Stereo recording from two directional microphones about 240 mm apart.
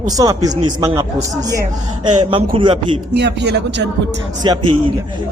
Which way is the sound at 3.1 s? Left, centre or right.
Right.